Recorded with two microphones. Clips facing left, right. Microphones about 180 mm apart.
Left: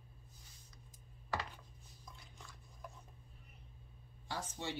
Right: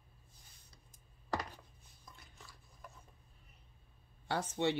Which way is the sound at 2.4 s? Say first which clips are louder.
Left 5 dB; centre (ahead or behind).